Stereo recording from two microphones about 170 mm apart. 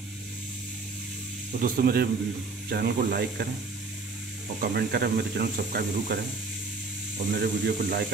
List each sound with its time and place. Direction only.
1.6 s speech: 60° right (ahead or behind)
4.6 s speech: 70° right (ahead or behind)
7.3 s speech: 80° right